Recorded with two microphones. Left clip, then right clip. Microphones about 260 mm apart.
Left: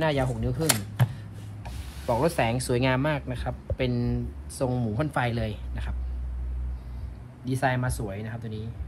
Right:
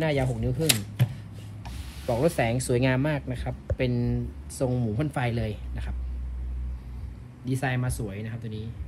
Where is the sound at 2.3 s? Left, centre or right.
Centre.